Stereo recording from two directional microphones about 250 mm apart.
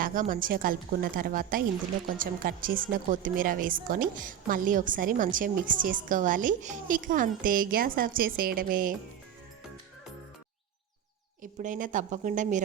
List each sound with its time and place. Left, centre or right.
0.0 s a woman's voice: right
11.6 s a woman's voice: right